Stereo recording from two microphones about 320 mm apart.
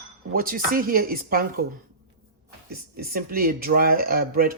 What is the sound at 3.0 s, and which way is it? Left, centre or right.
Speech, right.